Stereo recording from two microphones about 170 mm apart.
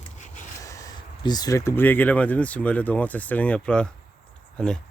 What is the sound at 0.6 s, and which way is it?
Speech, 20° left (ahead or behind).